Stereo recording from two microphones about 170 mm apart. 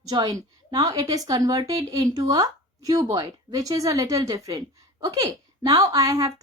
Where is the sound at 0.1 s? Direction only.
20° right (ahead or behind).